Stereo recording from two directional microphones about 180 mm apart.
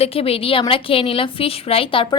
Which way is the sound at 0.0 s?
30° left (ahead or behind).